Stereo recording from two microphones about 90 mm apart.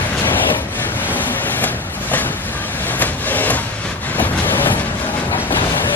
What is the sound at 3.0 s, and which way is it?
Vehicle, 20° left (ahead or behind).